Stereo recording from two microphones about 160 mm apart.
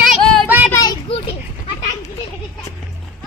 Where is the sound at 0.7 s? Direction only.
25° left (ahead or behind).